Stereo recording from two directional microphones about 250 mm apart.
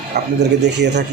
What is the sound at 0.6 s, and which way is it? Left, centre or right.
Speech, right.